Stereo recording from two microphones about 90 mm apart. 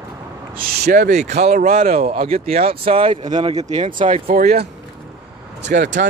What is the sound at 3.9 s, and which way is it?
Speech, 70° right (ahead or behind).